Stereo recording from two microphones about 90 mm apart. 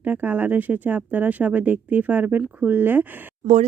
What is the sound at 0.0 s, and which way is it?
Speech, 20° right (ahead or behind).